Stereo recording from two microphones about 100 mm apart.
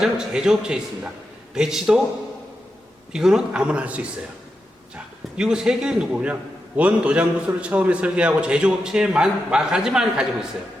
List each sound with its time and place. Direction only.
0.0 s a man's voice: 5° right (ahead or behind)
3.1 s a man's voice: 5° right (ahead or behind)
5.4 s a man's voice: 5° right (ahead or behind)